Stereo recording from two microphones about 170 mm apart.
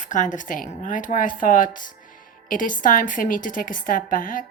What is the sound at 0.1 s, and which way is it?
Speech, 50° left (ahead or behind).